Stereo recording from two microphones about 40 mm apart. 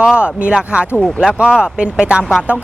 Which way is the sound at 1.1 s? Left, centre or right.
Centre.